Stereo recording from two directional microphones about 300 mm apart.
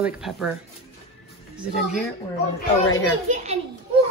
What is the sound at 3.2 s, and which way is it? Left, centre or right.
Speech, right.